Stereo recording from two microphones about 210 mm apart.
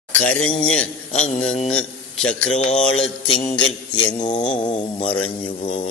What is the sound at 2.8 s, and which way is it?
Speech, 5° left (ahead or behind).